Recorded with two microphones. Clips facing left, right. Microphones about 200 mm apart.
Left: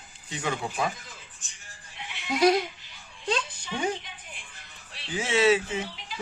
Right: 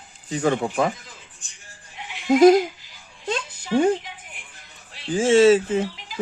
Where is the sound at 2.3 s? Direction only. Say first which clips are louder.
Right 9 dB; 45° right (ahead or behind).